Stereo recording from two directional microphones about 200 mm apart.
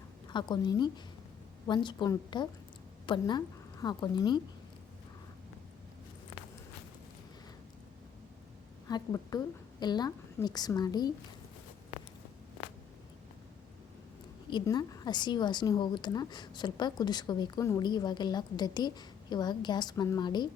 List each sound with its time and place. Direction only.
0.3 s a woman's voice: 20° left (ahead or behind)
8.9 s a woman's voice: 20° left (ahead or behind)
14.5 s a woman's voice: 20° left (ahead or behind)